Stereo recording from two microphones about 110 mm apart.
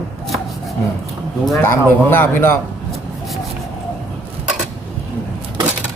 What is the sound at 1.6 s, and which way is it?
Speech, 20° left (ahead or behind).